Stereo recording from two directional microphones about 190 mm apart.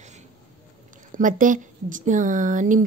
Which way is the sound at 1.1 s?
45° right (ahead or behind).